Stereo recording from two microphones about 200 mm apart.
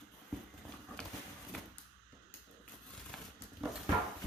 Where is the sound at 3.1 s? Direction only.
Centre (ahead or behind).